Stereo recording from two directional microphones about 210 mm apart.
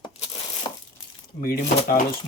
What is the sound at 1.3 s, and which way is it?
Speech, 40° left (ahead or behind).